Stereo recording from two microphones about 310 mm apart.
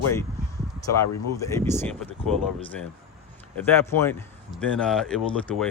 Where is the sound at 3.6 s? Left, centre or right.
Centre.